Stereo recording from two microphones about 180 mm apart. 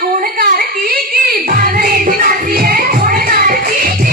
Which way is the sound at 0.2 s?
55° right (ahead or behind).